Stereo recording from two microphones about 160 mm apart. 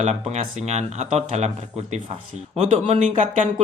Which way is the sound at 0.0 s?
45° right (ahead or behind).